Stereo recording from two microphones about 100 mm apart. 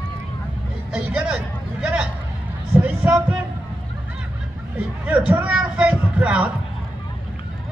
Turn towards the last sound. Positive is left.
turn(degrees=-10)  # may be behind; listen again after turning